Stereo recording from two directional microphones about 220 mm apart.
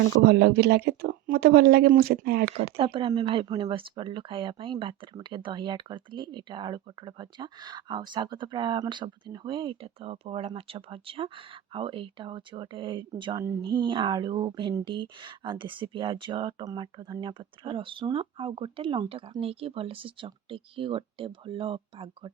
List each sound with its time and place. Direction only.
0.3 s speech: 50° right (ahead or behind)
2.7 s speech: 25° right (ahead or behind)